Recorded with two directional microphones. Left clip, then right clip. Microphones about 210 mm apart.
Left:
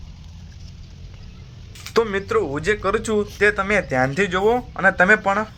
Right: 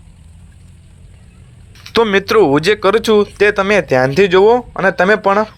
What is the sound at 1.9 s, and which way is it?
Speech, 35° right (ahead or behind).